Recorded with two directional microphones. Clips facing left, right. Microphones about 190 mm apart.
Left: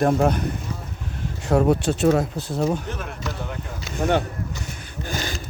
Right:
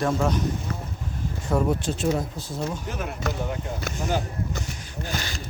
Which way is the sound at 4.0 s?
65° left (ahead or behind).